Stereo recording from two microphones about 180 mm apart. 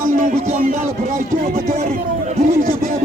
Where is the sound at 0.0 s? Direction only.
50° right (ahead or behind).